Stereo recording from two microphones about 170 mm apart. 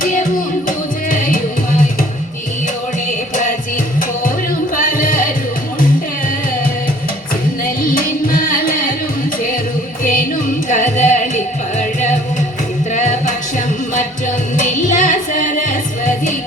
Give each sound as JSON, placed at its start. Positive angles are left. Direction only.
{"t": 0.0, "sound": "music", "side_deg": 50}
{"t": 4.7, "sound": "music", "side_deg": 55}
{"t": 7.8, "sound": "music", "side_deg": 55}
{"t": 10.0, "sound": "music", "side_deg": 55}
{"t": 14.5, "sound": "music", "side_deg": 50}